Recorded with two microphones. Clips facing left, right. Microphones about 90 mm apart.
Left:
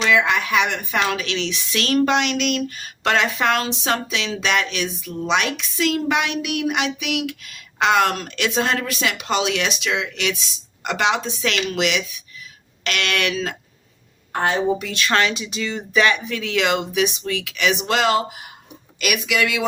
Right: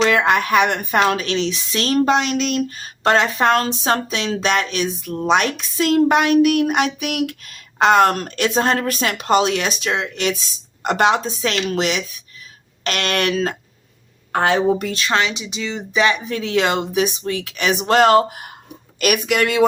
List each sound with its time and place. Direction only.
0.1 s a woman's voice: 50° right (ahead or behind)
14.3 s a woman's voice: 90° right
15.1 s a woman's voice: 20° right (ahead or behind); by 19.6 s 45° right (ahead or behind)